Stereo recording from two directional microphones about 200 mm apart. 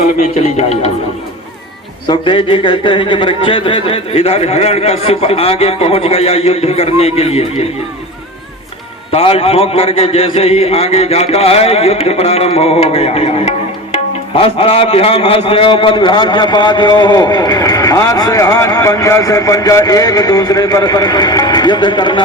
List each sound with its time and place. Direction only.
0.2 s speech: 35° left (ahead or behind)
2.0 s a man's voice: 25° left (ahead or behind)
9.1 s a man's voice: 30° left (ahead or behind)